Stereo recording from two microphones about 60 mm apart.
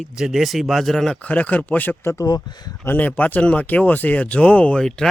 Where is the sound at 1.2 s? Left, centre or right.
Left.